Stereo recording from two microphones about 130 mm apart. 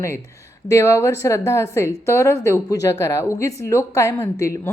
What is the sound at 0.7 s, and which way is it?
A woman's voice, 20° left (ahead or behind).